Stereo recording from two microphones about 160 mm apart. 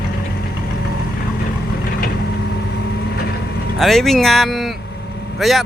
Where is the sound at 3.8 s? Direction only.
Centre (ahead or behind).